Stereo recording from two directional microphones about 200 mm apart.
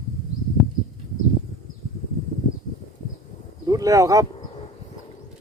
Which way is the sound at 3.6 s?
15° right (ahead or behind).